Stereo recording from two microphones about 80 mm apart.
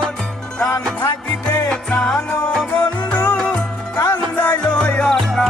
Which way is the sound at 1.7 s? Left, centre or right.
Centre.